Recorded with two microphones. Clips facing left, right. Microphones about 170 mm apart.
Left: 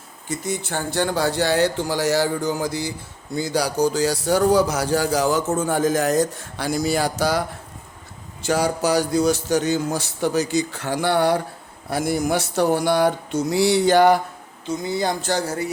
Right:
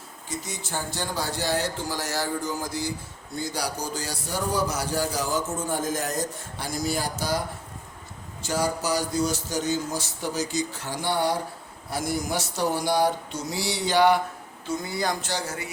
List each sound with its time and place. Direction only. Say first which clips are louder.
0.3 s speech: left 8 dB; 55° left (ahead or behind); by 2.9 s 75° left (ahead or behind)
3.3 s speech: left 9 dB; 90° left; by 11.3 s 65° left (ahead or behind)
11.9 s a sound: left 7 dB; 60° left (ahead or behind)
14.7 s speech: left 5 dB; 20° left (ahead or behind)
15.4 s speech: left 8 dB; 40° left (ahead or behind)